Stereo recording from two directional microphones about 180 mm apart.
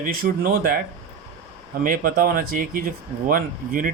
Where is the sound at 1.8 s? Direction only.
50° right (ahead or behind).